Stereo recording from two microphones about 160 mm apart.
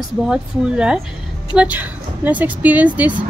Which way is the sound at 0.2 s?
5° right (ahead or behind).